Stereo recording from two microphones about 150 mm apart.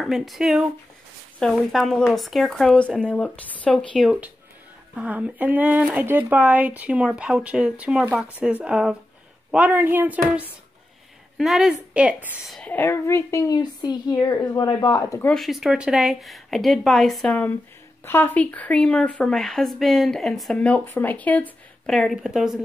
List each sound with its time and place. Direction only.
0.0 s speech: centre (ahead or behind)
12.4 s a woman's voice: 5° left (ahead or behind); by 15.2 s 20° left (ahead or behind)
15.2 s speech: centre (ahead or behind)